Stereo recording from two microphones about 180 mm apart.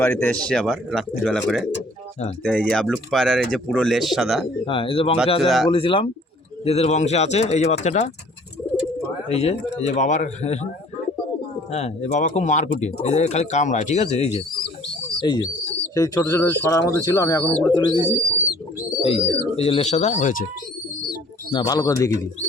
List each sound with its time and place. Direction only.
0.0 s speech: 10° left (ahead or behind)
4.6 s speech: 30° left (ahead or behind)
5.4 s speech: centre (ahead or behind)
5.6 s speech: 30° left (ahead or behind)
9.3 s speech: 35° left (ahead or behind)
11.7 s speech: 40° left (ahead or behind)
15.2 s speech: 25° left (ahead or behind)
19.0 s speech: 35° left (ahead or behind)
21.5 s speech: 20° left (ahead or behind)